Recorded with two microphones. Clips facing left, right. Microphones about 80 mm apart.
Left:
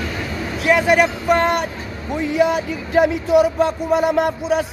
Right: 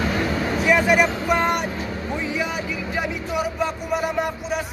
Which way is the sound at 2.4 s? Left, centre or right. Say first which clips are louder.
Left 8 dB; left.